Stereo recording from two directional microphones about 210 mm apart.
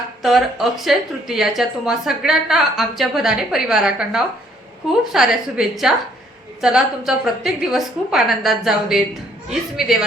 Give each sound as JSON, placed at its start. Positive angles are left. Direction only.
{"t": 0.2, "sound": "a woman's voice", "side_deg": 0}